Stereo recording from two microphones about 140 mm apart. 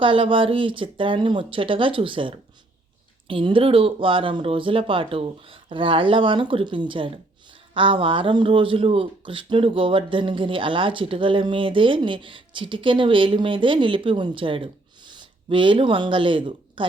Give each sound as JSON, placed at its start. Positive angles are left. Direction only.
{"t": 0.0, "sound": "speech", "side_deg": -40}